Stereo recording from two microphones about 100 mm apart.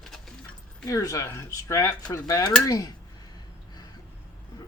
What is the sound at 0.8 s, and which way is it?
Speech, 35° left (ahead or behind).